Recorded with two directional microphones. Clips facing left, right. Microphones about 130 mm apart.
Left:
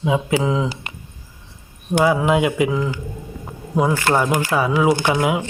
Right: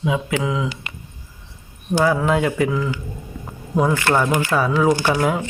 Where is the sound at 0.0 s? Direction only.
25° left (ahead or behind).